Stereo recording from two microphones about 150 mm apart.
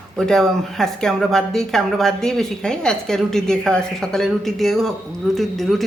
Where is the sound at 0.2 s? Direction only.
5° left (ahead or behind).